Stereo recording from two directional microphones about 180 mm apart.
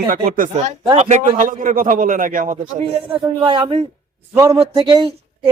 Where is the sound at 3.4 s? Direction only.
30° right (ahead or behind).